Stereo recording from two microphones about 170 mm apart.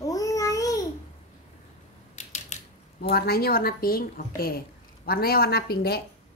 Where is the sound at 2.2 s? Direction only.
45° left (ahead or behind).